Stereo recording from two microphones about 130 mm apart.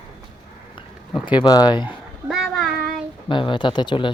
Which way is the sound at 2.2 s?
Centre (ahead or behind).